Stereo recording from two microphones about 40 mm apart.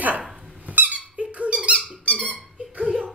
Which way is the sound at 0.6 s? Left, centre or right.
Right.